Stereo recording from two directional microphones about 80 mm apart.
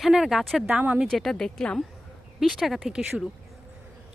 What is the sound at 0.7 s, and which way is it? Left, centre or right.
Speech, centre.